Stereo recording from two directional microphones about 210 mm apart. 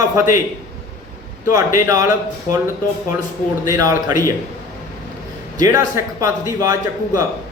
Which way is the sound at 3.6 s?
15° right (ahead or behind).